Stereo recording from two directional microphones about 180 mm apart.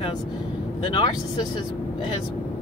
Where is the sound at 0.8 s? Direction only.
25° left (ahead or behind).